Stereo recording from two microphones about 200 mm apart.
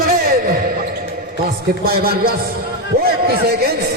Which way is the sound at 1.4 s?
50° right (ahead or behind).